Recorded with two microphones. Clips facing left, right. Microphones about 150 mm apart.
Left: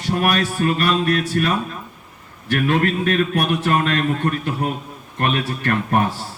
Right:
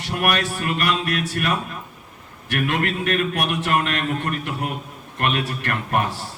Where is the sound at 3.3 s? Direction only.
30° left (ahead or behind).